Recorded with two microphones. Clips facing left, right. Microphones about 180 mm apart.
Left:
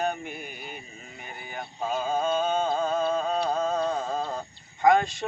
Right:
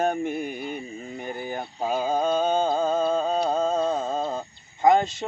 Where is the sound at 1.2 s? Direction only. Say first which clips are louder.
Right 10 dB; 45° right (ahead or behind).